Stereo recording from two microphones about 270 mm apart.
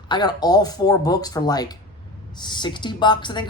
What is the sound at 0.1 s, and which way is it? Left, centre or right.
Speech, centre.